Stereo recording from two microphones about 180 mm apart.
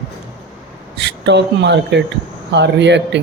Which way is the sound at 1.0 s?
75° right (ahead or behind).